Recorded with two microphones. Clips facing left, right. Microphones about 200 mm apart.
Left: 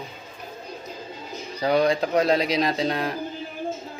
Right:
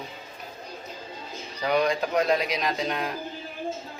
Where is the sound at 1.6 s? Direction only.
35° left (ahead or behind).